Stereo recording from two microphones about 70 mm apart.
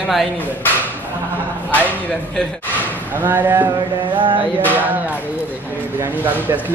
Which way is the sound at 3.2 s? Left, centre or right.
Right.